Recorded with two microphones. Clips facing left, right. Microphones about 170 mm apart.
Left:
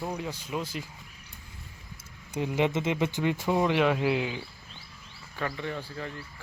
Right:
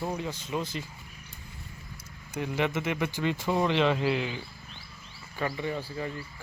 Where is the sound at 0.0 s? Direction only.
Centre (ahead or behind).